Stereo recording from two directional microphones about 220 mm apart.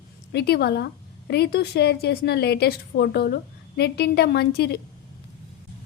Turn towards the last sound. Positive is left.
turn(degrees=45)  # may be behind; listen again after turning